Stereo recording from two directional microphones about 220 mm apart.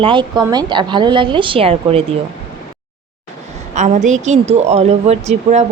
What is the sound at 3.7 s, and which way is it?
Speech, 35° right (ahead or behind).